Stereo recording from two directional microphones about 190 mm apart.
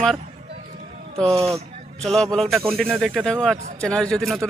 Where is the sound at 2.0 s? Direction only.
Centre (ahead or behind).